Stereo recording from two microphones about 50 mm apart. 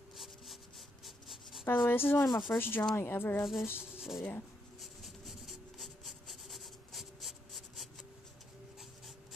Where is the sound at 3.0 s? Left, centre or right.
Left.